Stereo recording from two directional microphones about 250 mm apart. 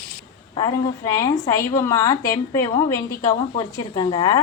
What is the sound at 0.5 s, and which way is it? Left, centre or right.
A woman's voice, centre.